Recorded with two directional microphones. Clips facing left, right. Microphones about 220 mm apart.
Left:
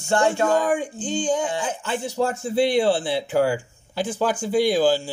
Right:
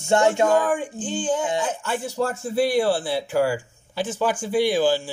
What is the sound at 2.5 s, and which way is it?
Speech, 20° left (ahead or behind).